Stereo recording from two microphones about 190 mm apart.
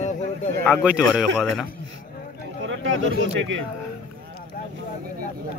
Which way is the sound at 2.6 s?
80° right.